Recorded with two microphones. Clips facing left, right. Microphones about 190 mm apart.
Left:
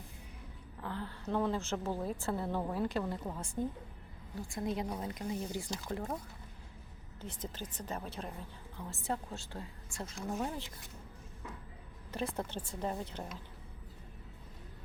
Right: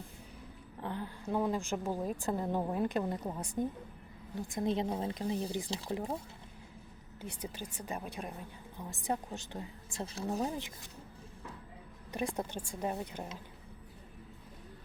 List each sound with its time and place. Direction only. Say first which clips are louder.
0.8 s a woman's voice: right 2 dB; 20° right (ahead or behind)
7.2 s a woman's voice: right 1 dB; 10° right (ahead or behind)
10.2 s speech: right 2 dB; 35° right (ahead or behind)
12.1 s a woman's voice: right 1 dB; 15° right (ahead or behind)